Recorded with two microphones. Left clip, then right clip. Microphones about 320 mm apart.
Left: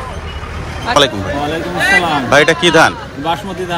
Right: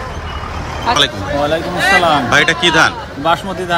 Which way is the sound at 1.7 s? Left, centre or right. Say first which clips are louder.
Left 1 dB; right.